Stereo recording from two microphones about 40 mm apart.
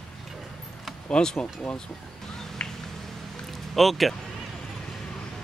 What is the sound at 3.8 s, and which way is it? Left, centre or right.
Speech, centre.